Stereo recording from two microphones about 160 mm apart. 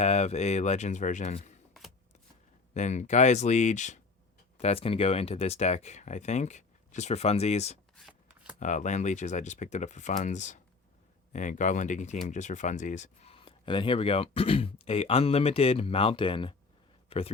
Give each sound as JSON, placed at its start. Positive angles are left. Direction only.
{"t": 0.0, "sound": "speech", "side_deg": 45}
{"t": 2.7, "sound": "speech", "side_deg": 45}
{"t": 4.5, "sound": "speech", "side_deg": 40}